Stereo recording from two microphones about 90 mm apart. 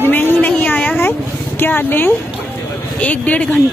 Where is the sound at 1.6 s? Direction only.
20° left (ahead or behind).